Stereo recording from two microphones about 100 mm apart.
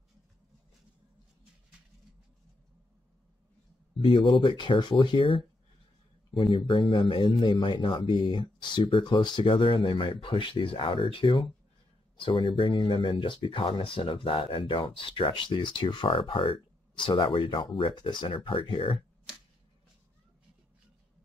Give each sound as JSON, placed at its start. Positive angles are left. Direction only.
{"t": 4.0, "sound": "speech", "side_deg": 60}